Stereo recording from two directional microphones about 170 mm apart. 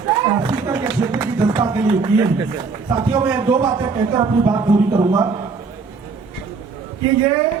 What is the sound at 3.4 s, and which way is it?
Speech, 25° right (ahead or behind).